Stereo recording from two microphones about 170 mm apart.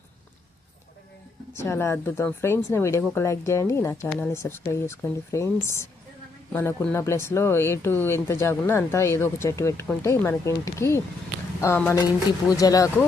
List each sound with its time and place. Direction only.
1.5 s speech: 15° left (ahead or behind)